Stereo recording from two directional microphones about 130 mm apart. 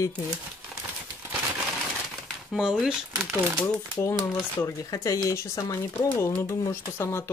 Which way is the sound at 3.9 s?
25° left (ahead or behind).